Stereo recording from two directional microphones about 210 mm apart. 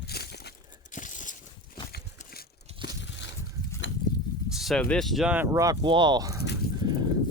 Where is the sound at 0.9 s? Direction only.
35° left (ahead or behind).